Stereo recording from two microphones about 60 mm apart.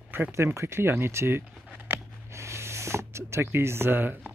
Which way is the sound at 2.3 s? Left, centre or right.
Right.